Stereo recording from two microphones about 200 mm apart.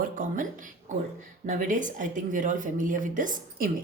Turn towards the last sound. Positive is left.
turn(degrees=-40)  # may be behind; listen again after turning